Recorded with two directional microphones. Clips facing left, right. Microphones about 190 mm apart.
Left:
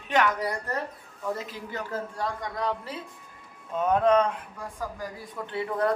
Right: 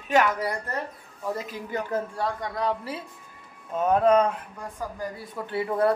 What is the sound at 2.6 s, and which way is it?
A woman's voice, 5° right (ahead or behind).